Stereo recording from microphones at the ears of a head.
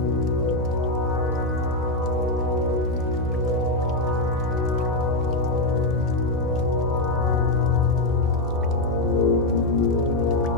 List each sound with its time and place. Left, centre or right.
9.1 s music: left